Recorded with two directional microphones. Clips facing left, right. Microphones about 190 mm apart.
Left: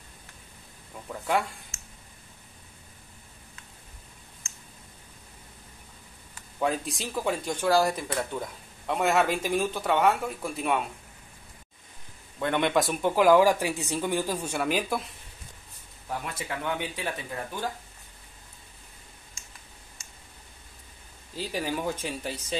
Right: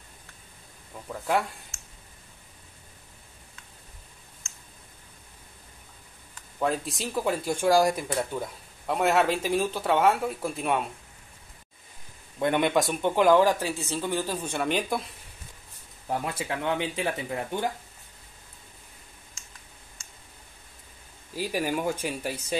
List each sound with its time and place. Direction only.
1.0 s a sound: centre (ahead or behind)
6.6 s speech: centre (ahead or behind)
12.4 s speech: 15° right (ahead or behind)
12.6 s speech: centre (ahead or behind)
16.4 s speech: 20° right (ahead or behind)
21.4 s speech: 10° right (ahead or behind)